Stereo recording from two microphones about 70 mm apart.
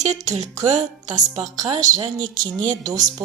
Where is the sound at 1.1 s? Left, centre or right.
Right.